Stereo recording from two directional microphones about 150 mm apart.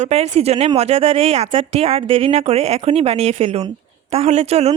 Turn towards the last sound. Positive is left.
turn(degrees=-45)  # may be behind; listen again after turning